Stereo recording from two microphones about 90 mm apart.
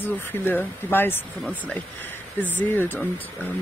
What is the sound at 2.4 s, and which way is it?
Speech, 20° left (ahead or behind).